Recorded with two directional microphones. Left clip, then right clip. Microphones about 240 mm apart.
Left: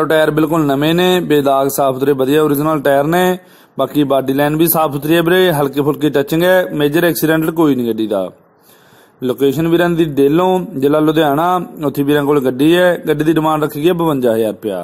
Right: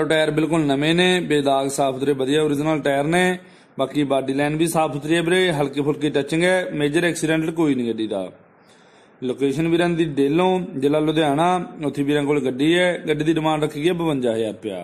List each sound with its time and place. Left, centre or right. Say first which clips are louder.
0.0 s speech: left 7 dB; left
9.3 s speech: left 7 dB; left